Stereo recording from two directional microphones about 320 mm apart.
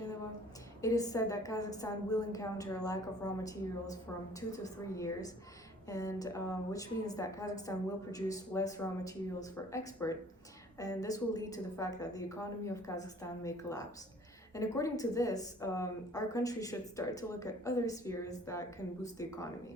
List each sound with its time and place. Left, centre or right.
0.8 s a woman's voice: centre